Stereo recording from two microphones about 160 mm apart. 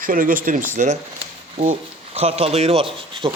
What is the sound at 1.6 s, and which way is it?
Speech, 40° right (ahead or behind).